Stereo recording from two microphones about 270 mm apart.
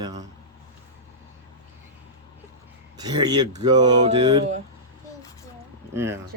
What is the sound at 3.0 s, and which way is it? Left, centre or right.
Speech, centre.